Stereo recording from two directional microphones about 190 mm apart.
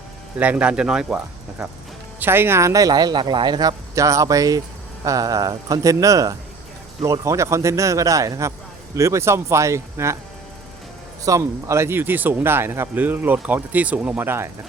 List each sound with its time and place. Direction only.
0.3 s speech: 5° right (ahead or behind)
11.3 s speech: 15° right (ahead or behind)